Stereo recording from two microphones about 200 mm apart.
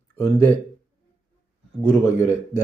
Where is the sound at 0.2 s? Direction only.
10° left (ahead or behind).